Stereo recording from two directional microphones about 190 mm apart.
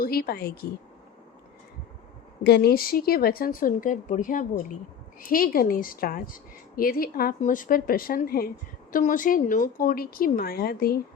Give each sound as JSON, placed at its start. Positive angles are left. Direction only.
{"t": 0.0, "sound": "a woman's voice", "side_deg": 50}
{"t": 2.4, "sound": "a woman's voice", "side_deg": 55}